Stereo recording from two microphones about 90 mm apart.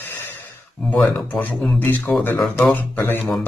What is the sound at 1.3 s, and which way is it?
Speech, 15° left (ahead or behind).